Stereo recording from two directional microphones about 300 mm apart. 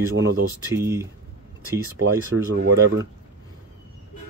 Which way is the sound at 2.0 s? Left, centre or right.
Right.